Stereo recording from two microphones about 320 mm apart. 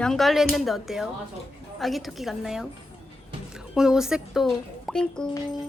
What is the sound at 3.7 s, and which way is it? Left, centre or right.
Speech, centre.